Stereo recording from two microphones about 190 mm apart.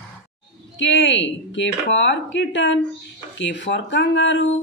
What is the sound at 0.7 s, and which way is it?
Speech, 75° left (ahead or behind).